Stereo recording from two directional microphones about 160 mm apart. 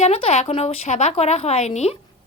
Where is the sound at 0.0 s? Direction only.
40° left (ahead or behind).